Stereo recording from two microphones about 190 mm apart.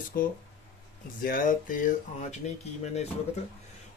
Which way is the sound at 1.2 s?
45° left (ahead or behind).